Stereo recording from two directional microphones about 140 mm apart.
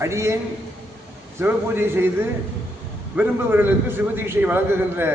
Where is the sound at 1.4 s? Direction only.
15° right (ahead or behind).